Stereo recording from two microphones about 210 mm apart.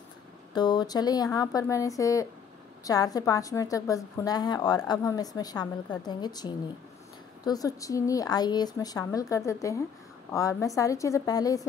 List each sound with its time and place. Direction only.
0.6 s a woman's voice: 20° left (ahead or behind)